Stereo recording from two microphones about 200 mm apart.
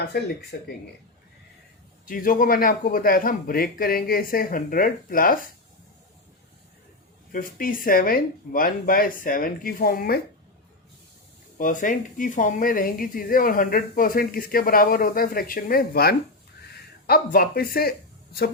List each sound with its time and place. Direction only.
0.5 s a woman's voice: 50° left (ahead or behind)
2.0 s a woman's voice: 45° left (ahead or behind)
7.3 s a woman's voice: 45° left (ahead or behind)
11.5 s a woman's voice: 40° left (ahead or behind)